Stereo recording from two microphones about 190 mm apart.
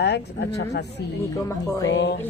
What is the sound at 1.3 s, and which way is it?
Speech, 15° left (ahead or behind).